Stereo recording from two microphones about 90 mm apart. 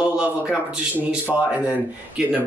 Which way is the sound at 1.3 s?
5° left (ahead or behind).